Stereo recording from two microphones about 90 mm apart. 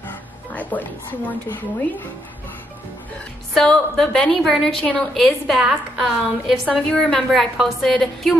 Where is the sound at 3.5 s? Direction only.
5° left (ahead or behind).